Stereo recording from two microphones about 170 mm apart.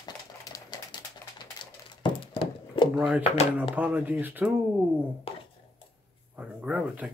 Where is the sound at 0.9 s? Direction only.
25° left (ahead or behind).